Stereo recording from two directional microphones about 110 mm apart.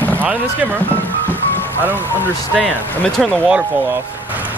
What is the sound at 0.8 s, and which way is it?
Music, 15° left (ahead or behind).